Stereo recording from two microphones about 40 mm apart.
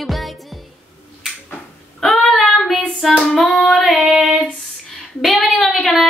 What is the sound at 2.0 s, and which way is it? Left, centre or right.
Child singing, centre.